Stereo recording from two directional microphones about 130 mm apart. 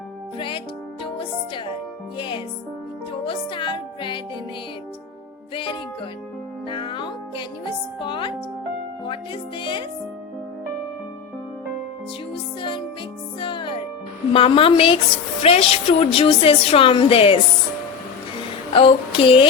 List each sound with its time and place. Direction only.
0.3 s speech: 40° left (ahead or behind)
1.0 s music: 40° left (ahead or behind)
2.1 s speech: 40° left (ahead or behind)
6.7 s speech: 40° left (ahead or behind)
12.3 s music: 40° left (ahead or behind)
14.3 s a woman's voice: 45° left (ahead or behind)
18.7 s a woman's voice: 45° left (ahead or behind)